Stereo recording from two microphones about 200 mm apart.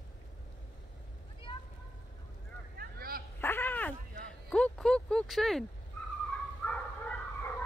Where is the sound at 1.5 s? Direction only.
25° left (ahead or behind).